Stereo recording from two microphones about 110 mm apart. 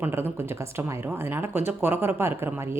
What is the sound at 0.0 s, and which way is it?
Speech, 20° right (ahead or behind).